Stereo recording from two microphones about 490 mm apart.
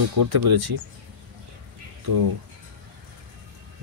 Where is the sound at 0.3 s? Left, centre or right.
Right.